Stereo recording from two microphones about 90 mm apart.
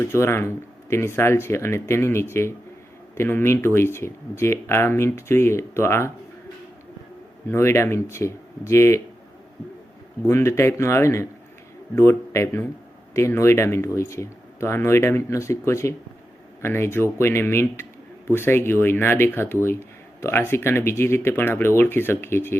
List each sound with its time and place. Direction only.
0.0 s speech: 30° left (ahead or behind)
7.5 s speech: 30° left (ahead or behind)
10.2 s speech: 30° left (ahead or behind)